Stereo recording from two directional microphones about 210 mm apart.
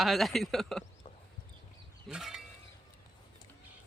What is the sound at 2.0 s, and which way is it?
Speech, centre (ahead or behind).